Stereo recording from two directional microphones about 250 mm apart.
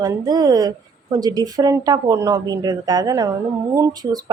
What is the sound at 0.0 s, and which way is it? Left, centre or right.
Speech, centre.